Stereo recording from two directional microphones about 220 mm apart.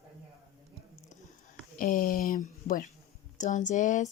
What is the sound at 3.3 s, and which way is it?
Speech, 35° left (ahead or behind).